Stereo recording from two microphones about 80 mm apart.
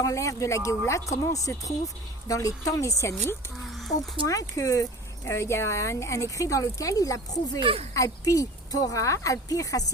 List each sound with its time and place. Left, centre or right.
0.0 s a woman's voice: left
3.8 s a sound: centre
4.3 s speech: left